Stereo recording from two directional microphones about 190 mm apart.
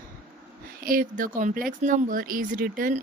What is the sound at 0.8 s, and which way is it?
Speech, 50° right (ahead or behind).